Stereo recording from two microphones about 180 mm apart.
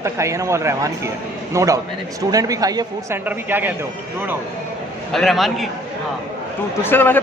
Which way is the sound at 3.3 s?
10° right (ahead or behind).